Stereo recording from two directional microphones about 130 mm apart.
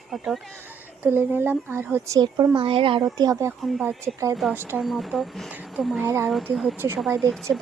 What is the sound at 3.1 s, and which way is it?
Speech, 30° right (ahead or behind).